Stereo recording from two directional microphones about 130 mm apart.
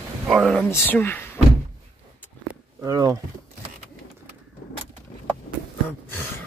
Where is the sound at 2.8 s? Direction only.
25° right (ahead or behind).